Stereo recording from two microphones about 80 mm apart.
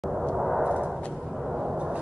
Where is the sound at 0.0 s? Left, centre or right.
Centre.